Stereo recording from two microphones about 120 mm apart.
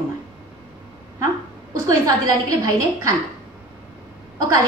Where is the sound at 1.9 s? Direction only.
30° right (ahead or behind).